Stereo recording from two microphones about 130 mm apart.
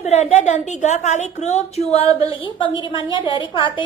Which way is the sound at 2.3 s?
40° left (ahead or behind).